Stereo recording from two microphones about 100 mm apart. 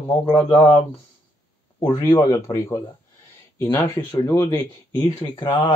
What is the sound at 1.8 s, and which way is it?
Speech, 35° left (ahead or behind).